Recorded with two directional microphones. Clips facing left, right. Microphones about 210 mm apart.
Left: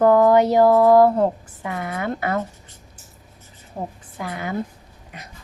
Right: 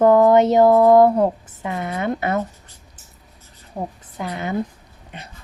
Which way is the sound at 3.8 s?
Centre (ahead or behind).